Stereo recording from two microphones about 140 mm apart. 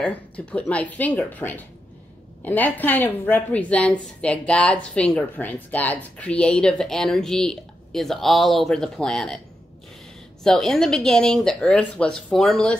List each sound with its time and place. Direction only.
0.0 s a woman's voice: 10° left (ahead or behind)
10.4 s speech: 5° left (ahead or behind)